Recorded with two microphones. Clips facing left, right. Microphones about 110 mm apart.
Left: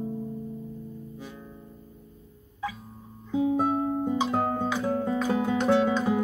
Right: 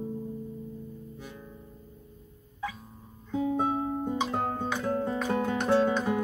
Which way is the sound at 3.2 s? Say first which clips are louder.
Left 3 dB; 15° left (ahead or behind).